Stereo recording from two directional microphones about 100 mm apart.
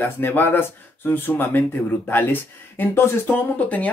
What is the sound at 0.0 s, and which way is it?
Speech, 20° left (ahead or behind).